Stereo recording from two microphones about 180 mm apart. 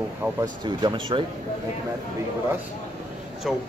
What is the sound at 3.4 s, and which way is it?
Speech, centre (ahead or behind).